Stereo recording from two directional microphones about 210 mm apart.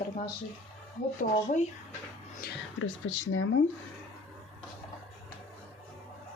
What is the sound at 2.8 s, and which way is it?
Speech, 70° left (ahead or behind).